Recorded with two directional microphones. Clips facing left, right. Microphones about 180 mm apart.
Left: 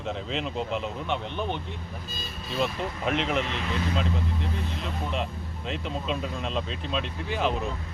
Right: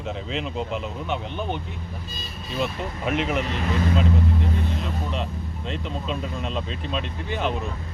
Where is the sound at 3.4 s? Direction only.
40° right (ahead or behind).